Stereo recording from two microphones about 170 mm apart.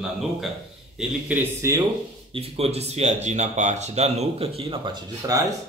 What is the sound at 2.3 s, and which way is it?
Speech, 35° right (ahead or behind).